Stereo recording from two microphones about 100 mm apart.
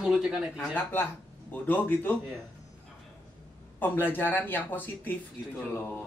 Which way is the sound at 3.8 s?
20° left (ahead or behind).